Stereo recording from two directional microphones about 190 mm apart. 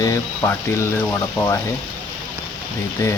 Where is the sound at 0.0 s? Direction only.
15° left (ahead or behind).